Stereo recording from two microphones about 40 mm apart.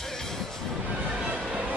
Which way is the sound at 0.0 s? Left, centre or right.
Centre.